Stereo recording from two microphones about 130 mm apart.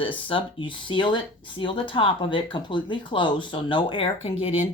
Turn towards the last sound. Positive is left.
turn(degrees=45)  # may be behind; listen again after turning